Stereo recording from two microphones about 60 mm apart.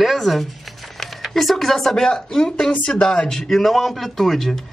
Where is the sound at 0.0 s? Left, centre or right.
Centre.